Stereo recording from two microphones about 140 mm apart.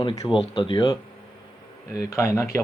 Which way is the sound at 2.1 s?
20° left (ahead or behind).